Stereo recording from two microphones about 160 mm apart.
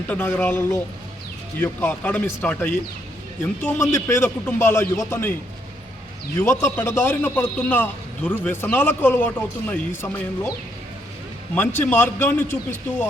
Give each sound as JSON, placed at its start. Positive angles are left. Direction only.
{"t": 0.1, "sound": "a man's voice", "side_deg": 10}
{"t": 6.4, "sound": "a man's voice", "side_deg": 15}
{"t": 11.5, "sound": "a man's voice", "side_deg": 15}